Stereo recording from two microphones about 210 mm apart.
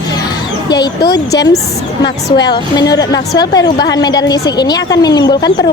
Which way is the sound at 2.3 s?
20° left (ahead or behind).